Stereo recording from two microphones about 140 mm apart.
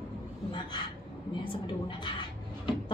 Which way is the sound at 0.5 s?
35° left (ahead or behind).